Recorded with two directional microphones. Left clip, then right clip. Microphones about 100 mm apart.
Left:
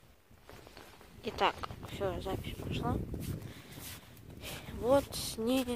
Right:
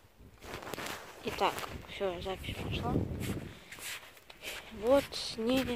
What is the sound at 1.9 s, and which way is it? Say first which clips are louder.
Speech: even; 25° left (ahead or behind).